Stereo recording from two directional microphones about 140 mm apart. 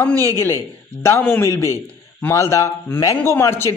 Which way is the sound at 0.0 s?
15° left (ahead or behind).